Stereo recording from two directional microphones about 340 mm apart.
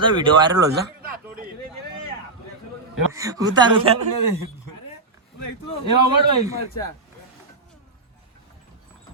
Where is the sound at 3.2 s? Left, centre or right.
Centre.